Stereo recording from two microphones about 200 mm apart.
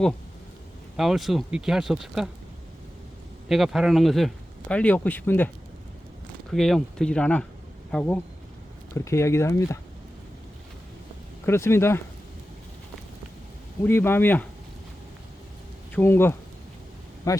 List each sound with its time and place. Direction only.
0.9 s speech: centre (ahead or behind)
3.5 s speech: centre (ahead or behind)
6.5 s speech: centre (ahead or behind)
11.4 s speech: 10° left (ahead or behind)
13.8 s speech: 10° left (ahead or behind)
15.9 s speech: 10° left (ahead or behind)